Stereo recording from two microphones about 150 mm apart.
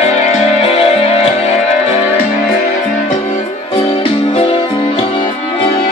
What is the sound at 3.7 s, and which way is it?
Music, 35° left (ahead or behind).